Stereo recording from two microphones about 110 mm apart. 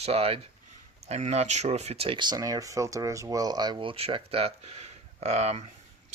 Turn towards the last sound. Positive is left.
turn(degrees=-90)